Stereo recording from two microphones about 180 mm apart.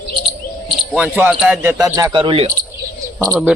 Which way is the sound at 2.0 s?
20° right (ahead or behind).